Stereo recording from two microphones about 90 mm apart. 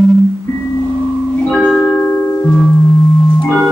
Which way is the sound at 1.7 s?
15° left (ahead or behind).